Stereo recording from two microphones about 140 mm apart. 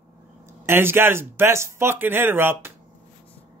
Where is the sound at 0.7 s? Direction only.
15° right (ahead or behind).